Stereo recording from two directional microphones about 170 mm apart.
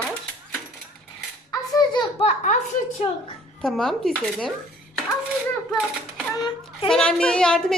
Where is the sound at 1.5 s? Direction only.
25° left (ahead or behind).